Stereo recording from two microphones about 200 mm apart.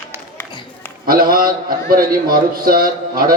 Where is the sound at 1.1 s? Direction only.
45° right (ahead or behind).